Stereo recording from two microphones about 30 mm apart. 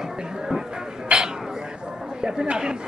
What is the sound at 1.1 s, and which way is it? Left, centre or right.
Speech, right.